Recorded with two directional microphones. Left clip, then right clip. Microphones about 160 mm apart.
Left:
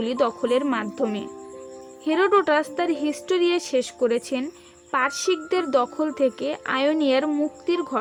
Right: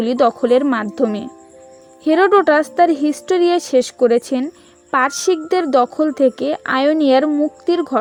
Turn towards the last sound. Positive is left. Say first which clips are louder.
# right 7 dB
turn(degrees=-40)  # may be behind; listen again after turning